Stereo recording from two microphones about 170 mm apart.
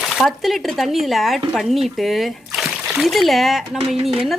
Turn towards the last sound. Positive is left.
turn(degrees=0)  # may be behind; listen again after turning